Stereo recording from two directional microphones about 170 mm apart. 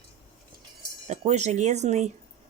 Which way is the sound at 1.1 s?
40° right (ahead or behind).